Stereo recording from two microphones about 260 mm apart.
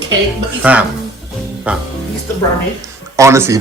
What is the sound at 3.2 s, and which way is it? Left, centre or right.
Speech, centre.